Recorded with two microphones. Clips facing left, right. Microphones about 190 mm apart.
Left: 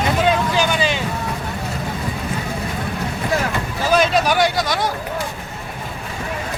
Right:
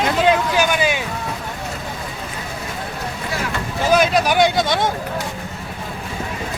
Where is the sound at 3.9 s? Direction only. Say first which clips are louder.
Even; 15° right (ahead or behind).